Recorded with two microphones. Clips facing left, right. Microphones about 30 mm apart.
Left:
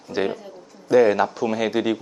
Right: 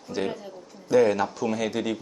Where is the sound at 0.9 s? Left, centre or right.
Centre.